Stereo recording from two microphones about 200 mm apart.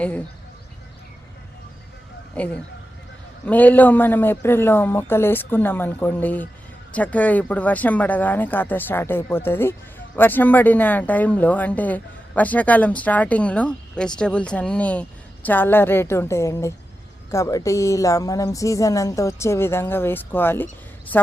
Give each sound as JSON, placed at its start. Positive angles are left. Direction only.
{"t": 2.4, "sound": "speech", "side_deg": 5}